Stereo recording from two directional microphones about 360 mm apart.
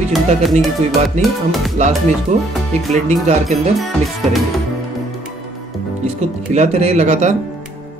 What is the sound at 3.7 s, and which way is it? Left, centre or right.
Music, centre.